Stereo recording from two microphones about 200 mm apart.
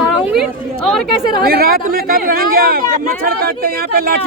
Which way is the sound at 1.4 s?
50° right (ahead or behind).